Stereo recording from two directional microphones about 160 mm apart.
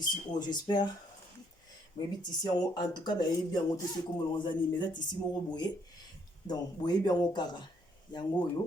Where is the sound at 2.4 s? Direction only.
25° left (ahead or behind).